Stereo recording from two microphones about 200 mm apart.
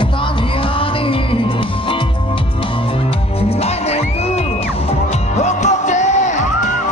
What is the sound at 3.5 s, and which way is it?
Music, 30° left (ahead or behind).